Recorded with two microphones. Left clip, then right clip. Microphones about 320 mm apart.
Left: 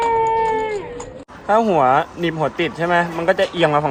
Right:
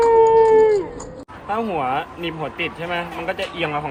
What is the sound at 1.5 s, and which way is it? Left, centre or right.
Speech, left.